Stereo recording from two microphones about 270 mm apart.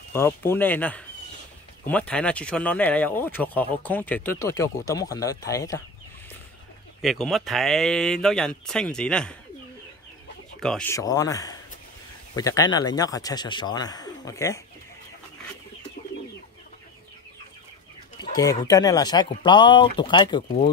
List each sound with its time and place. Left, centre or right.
0.1 s speech: centre
7.0 s speech: centre
10.6 s speech: centre
18.2 s speech: centre